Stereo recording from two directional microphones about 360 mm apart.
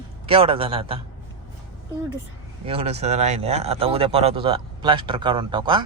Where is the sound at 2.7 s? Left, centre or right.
Centre.